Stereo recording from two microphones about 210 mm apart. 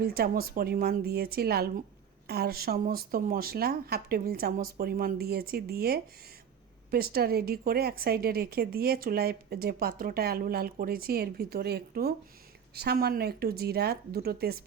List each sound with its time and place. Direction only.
0.0 s speech: 45° right (ahead or behind)